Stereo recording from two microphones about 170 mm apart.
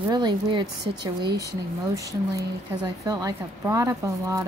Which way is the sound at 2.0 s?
20° right (ahead or behind).